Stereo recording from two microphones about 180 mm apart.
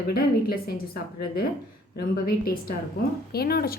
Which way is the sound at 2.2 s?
55° left (ahead or behind).